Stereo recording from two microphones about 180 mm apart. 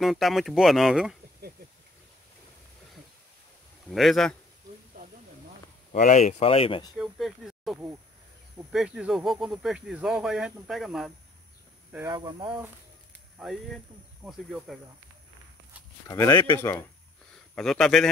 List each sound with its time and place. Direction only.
0.0 s speech: centre (ahead or behind)
3.9 s speech: centre (ahead or behind)
5.9 s speech: 45° left (ahead or behind)
7.0 s speech: centre (ahead or behind)
12.1 s speech: 25° right (ahead or behind)
13.4 s speech: centre (ahead or behind)
16.1 s speech: 20° left (ahead or behind)
17.6 s speech: 5° left (ahead or behind)